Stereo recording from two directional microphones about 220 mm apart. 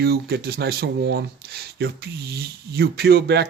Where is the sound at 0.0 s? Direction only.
45° right (ahead or behind).